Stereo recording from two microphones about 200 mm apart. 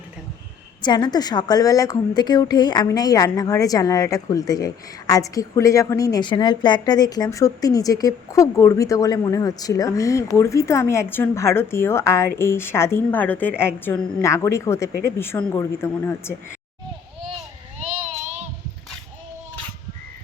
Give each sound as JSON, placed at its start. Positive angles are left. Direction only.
{"t": 0.8, "sound": "a woman's voice", "side_deg": 20}